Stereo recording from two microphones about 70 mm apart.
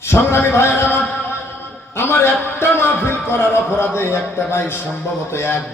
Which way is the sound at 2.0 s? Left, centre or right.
Left.